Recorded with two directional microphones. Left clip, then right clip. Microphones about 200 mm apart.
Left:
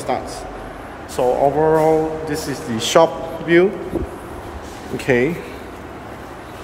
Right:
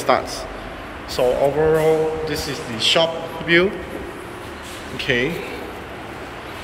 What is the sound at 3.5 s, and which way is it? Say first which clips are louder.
Speech: left 2 dB; 15° left (ahead or behind).